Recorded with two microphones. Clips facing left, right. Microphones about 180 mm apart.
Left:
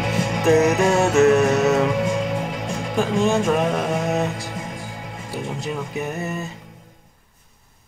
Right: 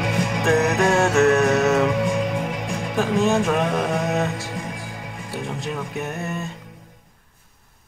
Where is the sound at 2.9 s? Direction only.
Centre (ahead or behind).